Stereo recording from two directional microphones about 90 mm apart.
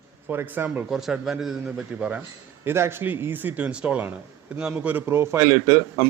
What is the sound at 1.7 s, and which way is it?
Speech, 15° right (ahead or behind).